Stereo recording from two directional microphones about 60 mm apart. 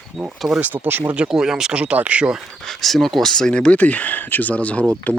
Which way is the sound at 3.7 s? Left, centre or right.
Left.